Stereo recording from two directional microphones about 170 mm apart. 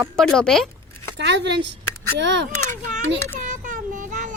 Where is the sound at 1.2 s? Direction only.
90° right.